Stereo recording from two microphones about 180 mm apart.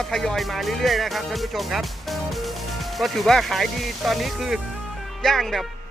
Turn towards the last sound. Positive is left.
turn(degrees=0)  # may be behind; listen again after turning